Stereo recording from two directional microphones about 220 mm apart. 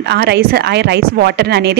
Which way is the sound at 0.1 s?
45° right (ahead or behind).